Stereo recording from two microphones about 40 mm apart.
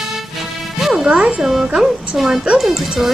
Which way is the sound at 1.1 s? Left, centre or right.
Right.